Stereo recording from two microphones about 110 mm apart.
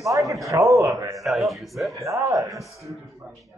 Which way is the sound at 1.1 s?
Centre (ahead or behind).